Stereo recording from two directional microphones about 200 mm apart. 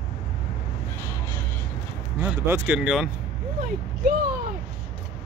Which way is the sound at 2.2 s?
10° right (ahead or behind).